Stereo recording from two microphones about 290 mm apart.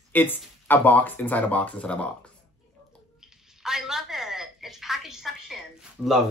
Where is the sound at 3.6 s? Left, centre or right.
Centre.